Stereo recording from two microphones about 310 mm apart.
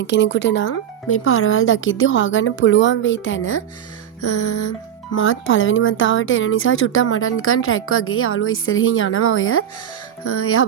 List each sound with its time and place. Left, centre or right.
0.0 s speech: left
4.2 s music: left
5.1 s speech: left
10.2 s music: left